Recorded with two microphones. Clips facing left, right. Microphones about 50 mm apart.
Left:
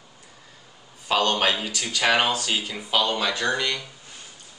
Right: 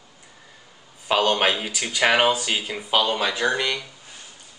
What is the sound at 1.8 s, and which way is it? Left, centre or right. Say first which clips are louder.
Speech: right 3 dB; right.